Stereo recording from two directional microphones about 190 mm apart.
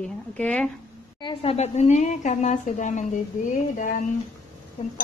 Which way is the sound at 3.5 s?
45° left (ahead or behind).